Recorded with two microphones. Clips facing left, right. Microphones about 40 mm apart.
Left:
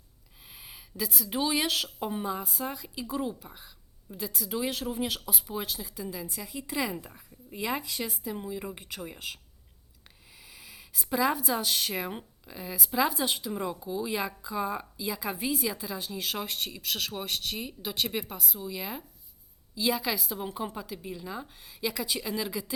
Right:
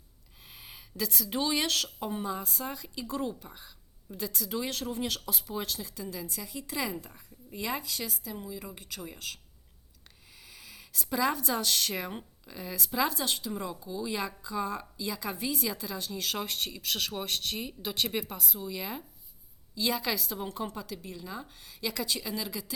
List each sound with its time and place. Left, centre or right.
0.4 s speech: centre